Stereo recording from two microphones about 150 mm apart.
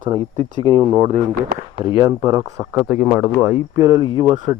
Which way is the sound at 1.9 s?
25° right (ahead or behind).